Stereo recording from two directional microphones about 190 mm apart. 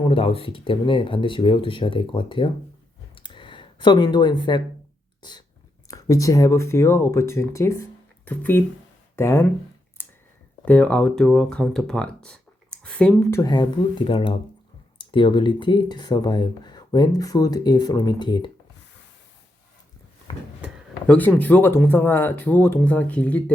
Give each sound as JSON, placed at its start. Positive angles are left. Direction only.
{"t": 0.0, "sound": "speech", "side_deg": 30}
{"t": 3.2, "sound": "a sound", "side_deg": 25}
{"t": 5.9, "sound": "speech", "side_deg": 15}
{"t": 10.0, "sound": "a sound", "side_deg": 10}
{"t": 10.7, "sound": "speech", "side_deg": 5}
{"t": 13.4, "sound": "speech", "side_deg": 25}
{"t": 21.1, "sound": "speech", "side_deg": 10}